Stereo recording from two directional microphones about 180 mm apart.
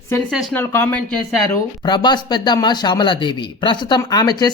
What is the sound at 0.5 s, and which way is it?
Speech, 10° left (ahead or behind).